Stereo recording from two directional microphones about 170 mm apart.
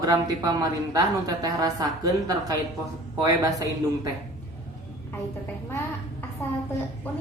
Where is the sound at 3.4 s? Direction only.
20° right (ahead or behind).